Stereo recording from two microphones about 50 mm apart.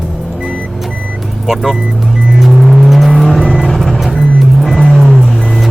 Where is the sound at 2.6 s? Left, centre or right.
Centre.